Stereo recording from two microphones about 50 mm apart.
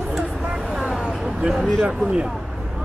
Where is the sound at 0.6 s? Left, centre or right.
Centre.